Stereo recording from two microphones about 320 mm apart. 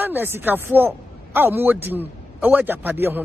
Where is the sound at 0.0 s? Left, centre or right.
Centre.